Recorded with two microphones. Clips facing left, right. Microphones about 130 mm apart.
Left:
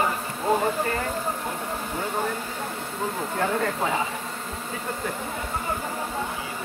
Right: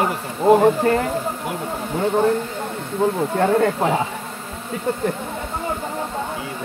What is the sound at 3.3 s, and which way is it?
Speech, 50° right (ahead or behind).